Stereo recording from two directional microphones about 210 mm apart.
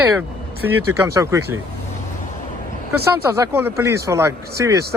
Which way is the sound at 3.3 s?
10° right (ahead or behind).